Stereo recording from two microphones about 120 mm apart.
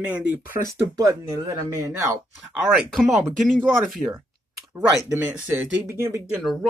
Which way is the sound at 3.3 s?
5° left (ahead or behind).